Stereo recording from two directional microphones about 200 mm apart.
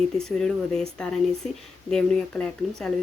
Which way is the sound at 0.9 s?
5° left (ahead or behind).